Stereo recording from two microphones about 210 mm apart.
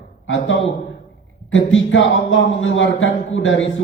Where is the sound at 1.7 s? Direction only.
65° left (ahead or behind).